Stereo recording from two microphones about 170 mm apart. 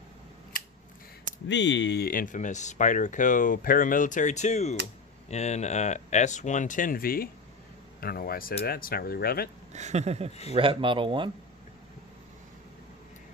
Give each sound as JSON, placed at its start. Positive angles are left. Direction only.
{"t": 1.5, "sound": "speech", "side_deg": 90}
{"t": 9.7, "sound": "speech", "side_deg": -40}